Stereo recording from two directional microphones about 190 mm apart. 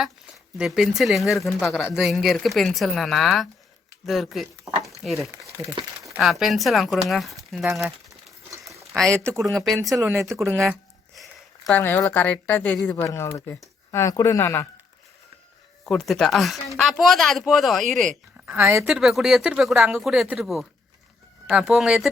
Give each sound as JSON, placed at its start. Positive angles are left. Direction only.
{"t": 0.6, "sound": "speech", "side_deg": 0}
{"t": 4.6, "sound": "a sound", "side_deg": -15}
{"t": 5.0, "sound": "speech", "side_deg": 0}
{"t": 8.6, "sound": "a sound", "side_deg": 0}
{"t": 9.6, "sound": "speech", "side_deg": 0}
{"t": 10.0, "sound": "speech", "side_deg": -15}
{"t": 10.6, "sound": "a sound", "side_deg": 0}
{"t": 11.8, "sound": "speech", "side_deg": 10}
{"t": 15.9, "sound": "speech", "side_deg": 5}
{"t": 18.4, "sound": "speech", "side_deg": -10}
{"t": 18.9, "sound": "speech", "side_deg": 0}